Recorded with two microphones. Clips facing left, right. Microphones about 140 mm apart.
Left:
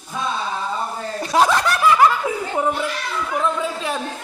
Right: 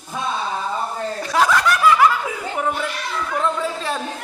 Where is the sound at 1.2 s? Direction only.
20° left (ahead or behind).